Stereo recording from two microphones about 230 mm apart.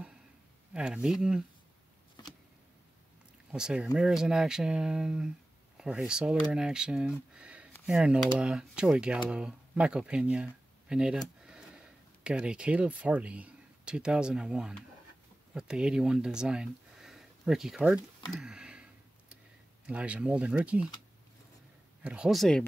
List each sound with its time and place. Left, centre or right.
0.7 s speech: centre
2.2 s a sound: centre
3.5 s speech: centre
18.3 s a sound: centre
19.9 s speech: centre
22.0 s speech: centre